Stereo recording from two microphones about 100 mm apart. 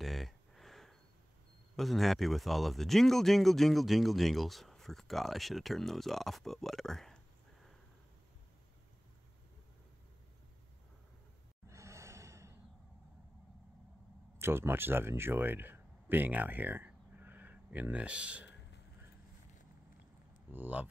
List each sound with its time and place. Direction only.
0.0 s a sound: centre (ahead or behind)
1.8 s speech: centre (ahead or behind)
11.7 s gasp: 30° right (ahead or behind)
14.4 s speech: 25° right (ahead or behind)
20.5 s speech: 15° right (ahead or behind)